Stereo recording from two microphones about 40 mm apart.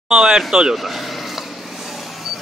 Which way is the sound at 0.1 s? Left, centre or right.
Right.